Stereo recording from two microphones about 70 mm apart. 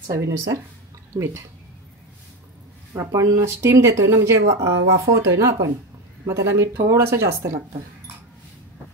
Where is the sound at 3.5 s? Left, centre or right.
Right.